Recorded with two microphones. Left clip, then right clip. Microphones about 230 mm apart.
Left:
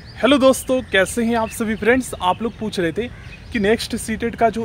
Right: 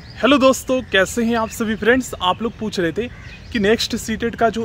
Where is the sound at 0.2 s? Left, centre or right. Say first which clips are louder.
Even; centre.